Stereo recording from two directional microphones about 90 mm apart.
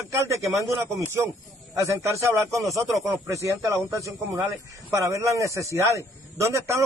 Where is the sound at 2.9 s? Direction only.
Centre (ahead or behind).